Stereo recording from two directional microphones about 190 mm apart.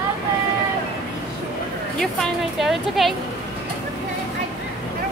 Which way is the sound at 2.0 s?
Centre (ahead or behind).